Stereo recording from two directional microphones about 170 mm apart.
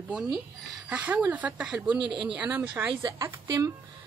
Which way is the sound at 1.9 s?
30° right (ahead or behind).